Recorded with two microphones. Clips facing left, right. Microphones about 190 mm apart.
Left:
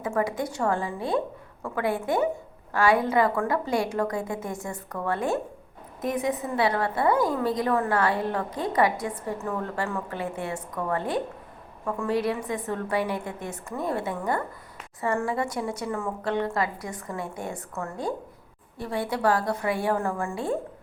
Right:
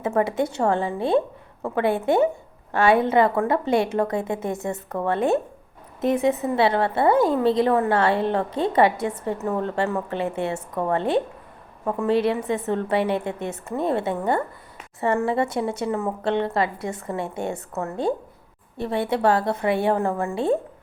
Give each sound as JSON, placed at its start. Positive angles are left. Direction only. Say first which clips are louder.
{"t": 0.0, "sound": "a woman's voice", "louder": "right 5 dB", "side_deg": -25}